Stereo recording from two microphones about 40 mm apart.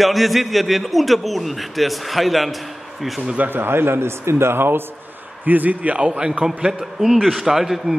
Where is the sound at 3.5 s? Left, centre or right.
Right.